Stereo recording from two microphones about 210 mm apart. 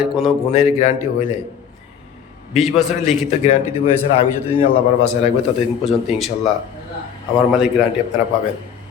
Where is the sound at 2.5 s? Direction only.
Centre (ahead or behind).